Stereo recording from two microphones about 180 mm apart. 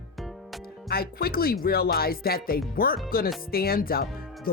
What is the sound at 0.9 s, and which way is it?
Speech, 60° left (ahead or behind).